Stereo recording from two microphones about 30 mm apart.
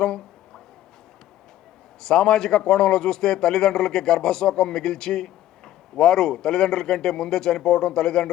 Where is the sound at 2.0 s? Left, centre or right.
Left.